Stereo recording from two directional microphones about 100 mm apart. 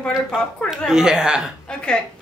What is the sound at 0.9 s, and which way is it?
Speech, 5° right (ahead or behind).